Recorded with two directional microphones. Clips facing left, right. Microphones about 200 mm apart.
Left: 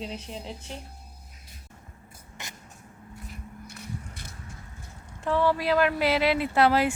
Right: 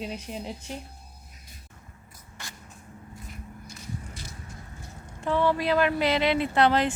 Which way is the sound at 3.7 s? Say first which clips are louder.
Right 1 dB; 60° left (ahead or behind).